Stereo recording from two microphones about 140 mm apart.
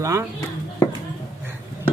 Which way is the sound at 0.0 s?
20° right (ahead or behind).